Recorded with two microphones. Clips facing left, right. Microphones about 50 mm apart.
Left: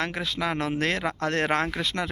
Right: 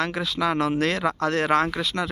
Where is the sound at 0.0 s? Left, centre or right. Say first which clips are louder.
Right 4 dB; left.